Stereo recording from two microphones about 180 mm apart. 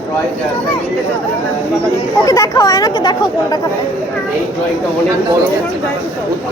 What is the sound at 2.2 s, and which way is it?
Speech, 20° left (ahead or behind).